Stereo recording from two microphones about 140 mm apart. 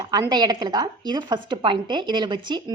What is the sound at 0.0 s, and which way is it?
A woman's voice, 30° right (ahead or behind).